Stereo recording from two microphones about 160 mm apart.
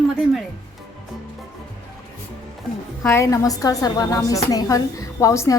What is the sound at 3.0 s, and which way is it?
A woman's voice, 15° left (ahead or behind).